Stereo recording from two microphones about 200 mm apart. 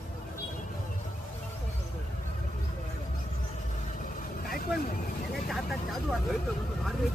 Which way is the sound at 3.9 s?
40° left (ahead or behind).